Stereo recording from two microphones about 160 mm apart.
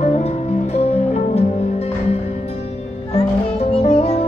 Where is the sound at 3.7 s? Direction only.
40° left (ahead or behind).